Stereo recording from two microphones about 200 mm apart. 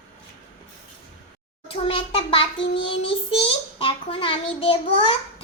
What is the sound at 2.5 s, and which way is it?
Child singing, 65° left (ahead or behind).